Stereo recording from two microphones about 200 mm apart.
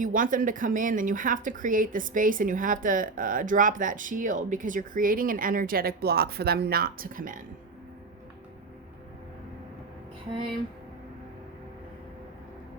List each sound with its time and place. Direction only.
0.0 s a woman's voice: 40° right (ahead or behind)